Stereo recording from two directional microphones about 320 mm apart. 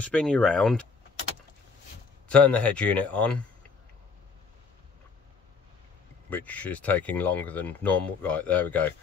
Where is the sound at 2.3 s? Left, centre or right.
Centre.